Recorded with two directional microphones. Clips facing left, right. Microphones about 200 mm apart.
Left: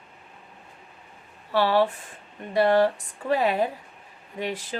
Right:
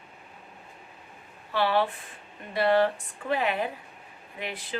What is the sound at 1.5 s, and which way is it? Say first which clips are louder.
Speech: left 4 dB; 40° left (ahead or behind).